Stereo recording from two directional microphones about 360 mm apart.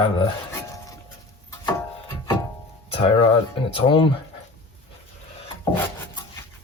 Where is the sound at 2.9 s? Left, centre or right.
Centre.